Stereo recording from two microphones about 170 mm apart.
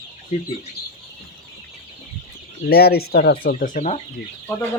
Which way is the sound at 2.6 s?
65° left (ahead or behind).